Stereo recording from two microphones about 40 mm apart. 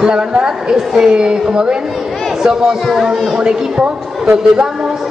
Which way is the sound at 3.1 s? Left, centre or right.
Right.